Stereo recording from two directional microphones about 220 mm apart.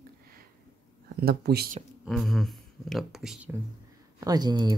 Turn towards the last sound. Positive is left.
turn(degrees=-20)  # may be behind; listen again after turning